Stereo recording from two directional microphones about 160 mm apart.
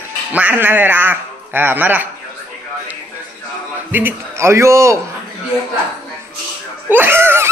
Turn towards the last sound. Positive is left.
turn(degrees=-15)  # may be behind; listen again after turning